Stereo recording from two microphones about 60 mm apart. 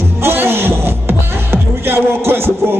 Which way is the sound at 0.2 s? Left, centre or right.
Right.